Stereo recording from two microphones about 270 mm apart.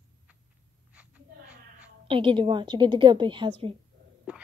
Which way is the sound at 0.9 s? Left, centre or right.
Centre.